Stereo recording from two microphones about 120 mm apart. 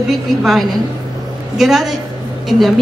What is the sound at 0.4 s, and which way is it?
A woman's voice, centre (ahead or behind).